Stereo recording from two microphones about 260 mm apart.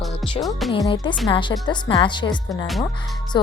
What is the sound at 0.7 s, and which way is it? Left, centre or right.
A woman's voice, centre.